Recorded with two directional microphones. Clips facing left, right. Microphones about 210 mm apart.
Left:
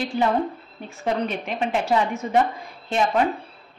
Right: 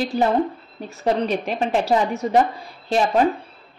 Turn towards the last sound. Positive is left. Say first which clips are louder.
# right 3 dB
turn(degrees=-35)  # may be behind; listen again after turning